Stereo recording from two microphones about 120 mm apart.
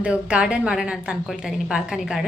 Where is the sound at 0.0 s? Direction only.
10° right (ahead or behind).